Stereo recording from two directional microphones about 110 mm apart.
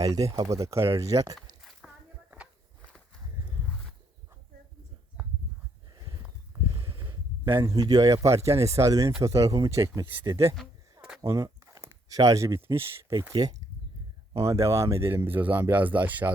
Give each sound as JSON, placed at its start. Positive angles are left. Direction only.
{"t": 0.0, "sound": "speech", "side_deg": -30}
{"t": 1.8, "sound": "a sound", "side_deg": -5}
{"t": 6.7, "sound": "a sound", "side_deg": -45}
{"t": 7.6, "sound": "speech", "side_deg": -30}
{"t": 11.2, "sound": "speech", "side_deg": -30}
{"t": 14.3, "sound": "speech", "side_deg": -25}